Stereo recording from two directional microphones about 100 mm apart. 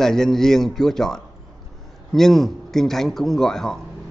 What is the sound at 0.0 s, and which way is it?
A man's voice, 5° left (ahead or behind).